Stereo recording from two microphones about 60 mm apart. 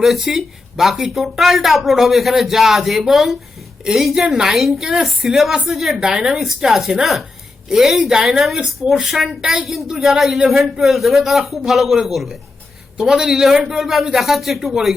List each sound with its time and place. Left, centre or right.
0.0 s speech: centre
9.4 s speech: centre
9.6 s speech: centre